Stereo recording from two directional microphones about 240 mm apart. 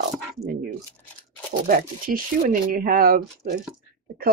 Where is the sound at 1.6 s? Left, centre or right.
Right.